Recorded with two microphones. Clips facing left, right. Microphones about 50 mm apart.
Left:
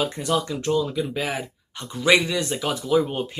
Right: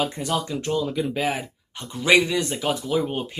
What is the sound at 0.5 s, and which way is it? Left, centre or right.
Speech, centre.